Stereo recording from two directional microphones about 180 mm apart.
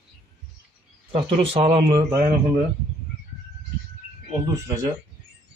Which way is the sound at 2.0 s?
15° right (ahead or behind).